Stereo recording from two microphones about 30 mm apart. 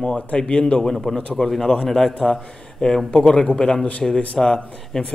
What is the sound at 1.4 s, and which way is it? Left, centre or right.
Speech, left.